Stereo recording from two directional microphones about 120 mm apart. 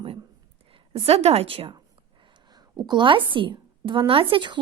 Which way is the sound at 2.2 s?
40° right (ahead or behind).